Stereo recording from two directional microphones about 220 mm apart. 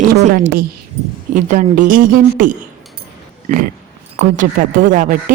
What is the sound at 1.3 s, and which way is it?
Speech, 35° right (ahead or behind).